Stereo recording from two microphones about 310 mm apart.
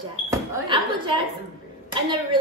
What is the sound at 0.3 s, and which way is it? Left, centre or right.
A woman's voice, centre.